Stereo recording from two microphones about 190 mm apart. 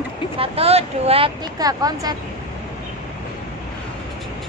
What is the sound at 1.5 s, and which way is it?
Speech, 20° right (ahead or behind).